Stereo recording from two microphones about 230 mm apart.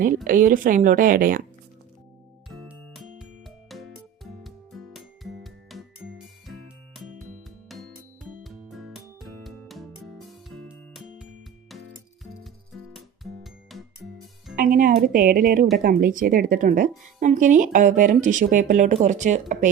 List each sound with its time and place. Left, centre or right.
0.3 s speech: right
2.5 s music: centre
13.4 s music: centre
14.5 s music: right
15.8 s speech: right